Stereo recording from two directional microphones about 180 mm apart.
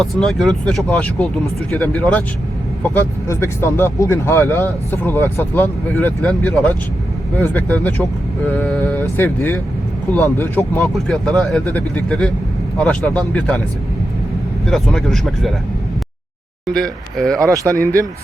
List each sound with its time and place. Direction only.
0.0 s speech: centre (ahead or behind)
14.7 s speech: centre (ahead or behind)
16.7 s speech: 5° left (ahead or behind)
17.5 s speech: 20° right (ahead or behind)